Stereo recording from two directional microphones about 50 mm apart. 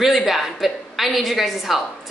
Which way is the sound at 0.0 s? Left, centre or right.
Centre.